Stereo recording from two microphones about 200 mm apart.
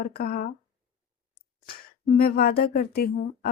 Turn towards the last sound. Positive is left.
turn(degrees=50)  # may be behind; listen again after turning